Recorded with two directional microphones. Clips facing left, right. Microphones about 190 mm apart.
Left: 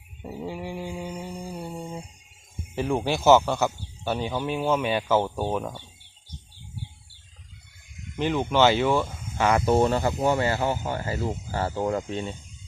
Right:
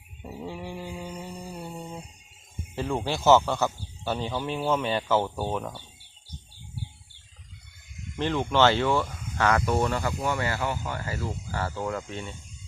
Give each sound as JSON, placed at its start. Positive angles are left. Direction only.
{"t": 0.3, "sound": "mantra", "side_deg": 10}
{"t": 2.7, "sound": "speech", "side_deg": 15}
{"t": 8.1, "sound": "speech", "side_deg": 10}
{"t": 9.0, "sound": "cricket", "side_deg": 25}
{"t": 9.5, "sound": "speech", "side_deg": 25}
{"t": 11.8, "sound": "speech", "side_deg": 35}
{"t": 12.0, "sound": "speech", "side_deg": 20}